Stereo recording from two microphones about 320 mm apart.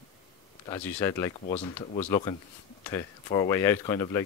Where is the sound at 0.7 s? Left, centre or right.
Centre.